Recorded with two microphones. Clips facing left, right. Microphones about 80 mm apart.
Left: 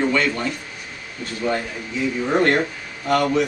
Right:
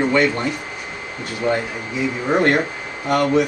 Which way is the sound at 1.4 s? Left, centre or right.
Right.